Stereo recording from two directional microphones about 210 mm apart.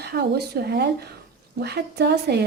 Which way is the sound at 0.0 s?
50° right (ahead or behind).